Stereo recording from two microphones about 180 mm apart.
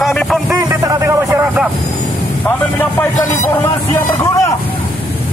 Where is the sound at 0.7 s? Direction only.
15° right (ahead or behind).